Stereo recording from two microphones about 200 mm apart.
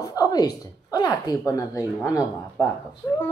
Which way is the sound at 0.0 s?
20° left (ahead or behind).